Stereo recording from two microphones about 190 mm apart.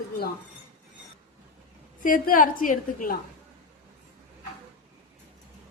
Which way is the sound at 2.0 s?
45° left (ahead or behind).